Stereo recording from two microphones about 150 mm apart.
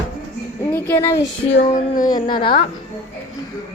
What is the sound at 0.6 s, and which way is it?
Speech, 15° left (ahead or behind).